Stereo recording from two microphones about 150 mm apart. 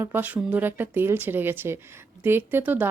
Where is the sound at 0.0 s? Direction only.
15° right (ahead or behind).